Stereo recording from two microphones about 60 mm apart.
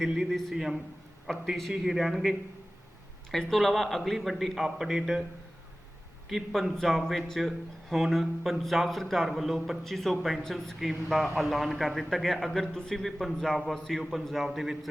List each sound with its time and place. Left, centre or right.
0.5 s a man's voice: centre
3.3 s speech: centre
6.2 s speech: centre